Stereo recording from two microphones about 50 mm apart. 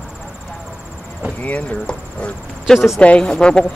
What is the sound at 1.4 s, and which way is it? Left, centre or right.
Insect, left.